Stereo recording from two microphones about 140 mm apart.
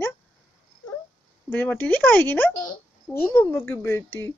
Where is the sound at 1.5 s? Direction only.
10° left (ahead or behind).